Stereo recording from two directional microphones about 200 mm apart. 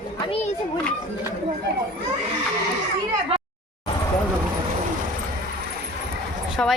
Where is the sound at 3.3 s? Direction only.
30° right (ahead or behind).